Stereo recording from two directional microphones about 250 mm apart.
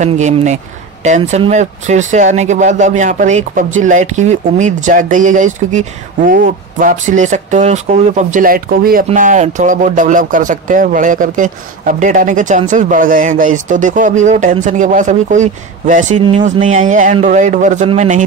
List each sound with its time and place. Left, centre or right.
0.0 s speech: right